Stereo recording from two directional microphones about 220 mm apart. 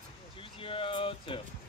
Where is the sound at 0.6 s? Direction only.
25° left (ahead or behind).